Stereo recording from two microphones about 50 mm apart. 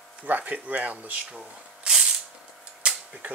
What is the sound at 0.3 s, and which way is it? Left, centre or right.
Speech, right.